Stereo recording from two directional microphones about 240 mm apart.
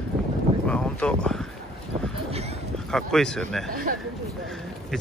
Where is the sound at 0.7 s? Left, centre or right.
Centre.